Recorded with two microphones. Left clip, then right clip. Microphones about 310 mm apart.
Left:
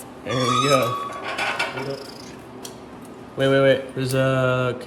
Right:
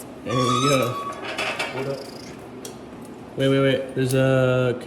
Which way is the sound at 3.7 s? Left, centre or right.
Centre.